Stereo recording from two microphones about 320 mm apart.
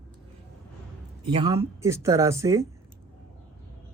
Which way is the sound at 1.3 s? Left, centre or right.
Centre.